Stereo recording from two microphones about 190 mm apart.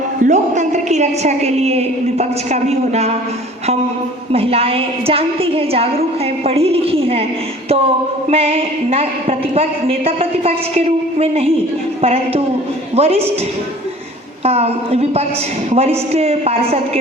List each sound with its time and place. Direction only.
0.3 s a woman's voice: 40° right (ahead or behind)
4.3 s a woman's voice: 30° right (ahead or behind)
8.3 s a woman's voice: 30° right (ahead or behind)
14.4 s a woman's voice: 35° right (ahead or behind)